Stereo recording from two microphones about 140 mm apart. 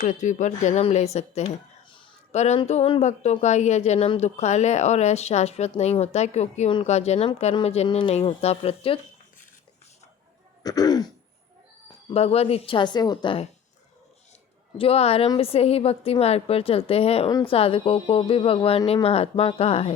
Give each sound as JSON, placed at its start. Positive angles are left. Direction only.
{"t": 0.0, "sound": "a woman's voice", "side_deg": 65}
{"t": 1.5, "sound": "a sound", "side_deg": 35}
{"t": 2.3, "sound": "speech", "side_deg": 55}
{"t": 8.1, "sound": "speech", "side_deg": 45}
{"t": 10.6, "sound": "throat clearing", "side_deg": 25}
{"t": 12.0, "sound": "speech", "side_deg": 45}
{"t": 14.8, "sound": "speech", "side_deg": 45}